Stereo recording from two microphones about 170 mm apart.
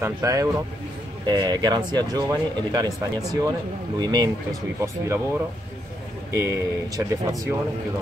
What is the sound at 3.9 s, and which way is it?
Speech, 25° right (ahead or behind).